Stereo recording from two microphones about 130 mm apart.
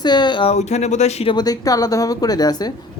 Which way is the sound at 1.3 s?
30° left (ahead or behind).